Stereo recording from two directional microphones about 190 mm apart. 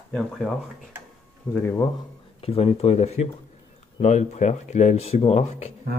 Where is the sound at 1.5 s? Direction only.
10° left (ahead or behind).